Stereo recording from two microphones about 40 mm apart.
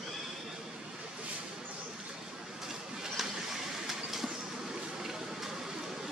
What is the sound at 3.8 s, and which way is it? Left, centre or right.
Train, centre.